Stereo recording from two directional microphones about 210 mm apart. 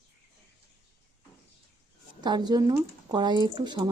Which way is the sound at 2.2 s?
20° right (ahead or behind).